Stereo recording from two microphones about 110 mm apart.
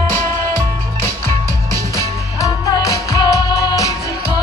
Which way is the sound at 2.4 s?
30° left (ahead or behind).